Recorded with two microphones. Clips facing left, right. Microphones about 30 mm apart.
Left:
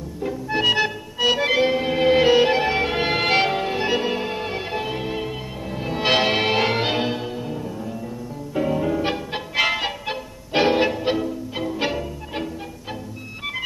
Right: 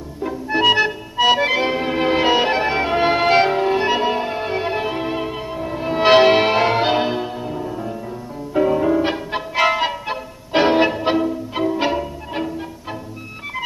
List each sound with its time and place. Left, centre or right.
0.2 s organ: centre
7.7 s music: right
8.5 s music: centre